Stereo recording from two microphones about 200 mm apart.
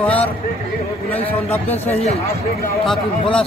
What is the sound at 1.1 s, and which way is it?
Speech, 30° left (ahead or behind).